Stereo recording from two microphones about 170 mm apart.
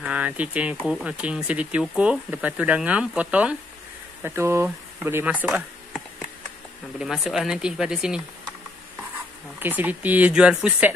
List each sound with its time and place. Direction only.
0.0 s speech: 5° right (ahead or behind)
7.0 s speech: centre (ahead or behind)
9.6 s speech: 10° right (ahead or behind)